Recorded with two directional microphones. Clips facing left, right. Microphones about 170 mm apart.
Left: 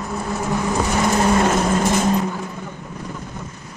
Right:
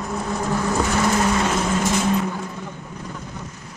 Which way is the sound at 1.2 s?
45° left (ahead or behind).